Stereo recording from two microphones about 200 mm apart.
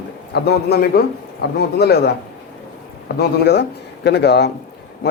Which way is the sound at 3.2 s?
55° left (ahead or behind).